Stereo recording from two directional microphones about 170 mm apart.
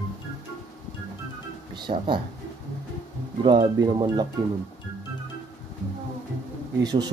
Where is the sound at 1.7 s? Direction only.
25° right (ahead or behind).